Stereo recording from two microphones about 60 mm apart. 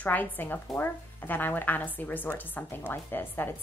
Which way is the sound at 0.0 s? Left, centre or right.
Left.